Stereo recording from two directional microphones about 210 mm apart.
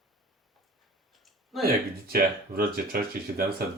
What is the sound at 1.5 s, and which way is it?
Speech, centre (ahead or behind).